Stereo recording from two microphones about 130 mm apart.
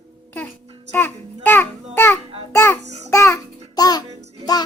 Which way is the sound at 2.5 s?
20° left (ahead or behind).